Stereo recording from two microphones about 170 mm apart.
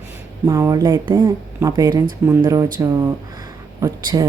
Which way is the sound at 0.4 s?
20° right (ahead or behind).